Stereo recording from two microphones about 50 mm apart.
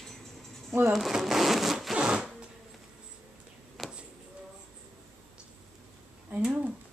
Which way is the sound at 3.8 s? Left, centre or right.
Centre.